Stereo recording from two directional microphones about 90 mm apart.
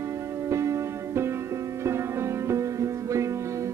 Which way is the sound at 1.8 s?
30° right (ahead or behind).